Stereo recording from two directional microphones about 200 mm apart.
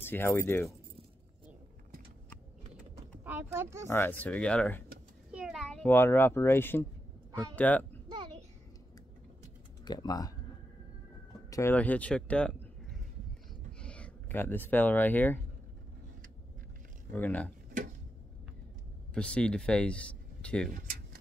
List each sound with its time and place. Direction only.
0.0 s speech: 10° left (ahead or behind)
3.3 s speech: 10° right (ahead or behind)
3.8 s a child's voice: 10° left (ahead or behind)
9.8 s speech: 20° left (ahead or behind)
11.5 s speech: 10° left (ahead or behind)
13.7 s speech: 5° left (ahead or behind)
17.1 s speech: 10° left (ahead or behind)
19.1 s speech: 5° left (ahead or behind)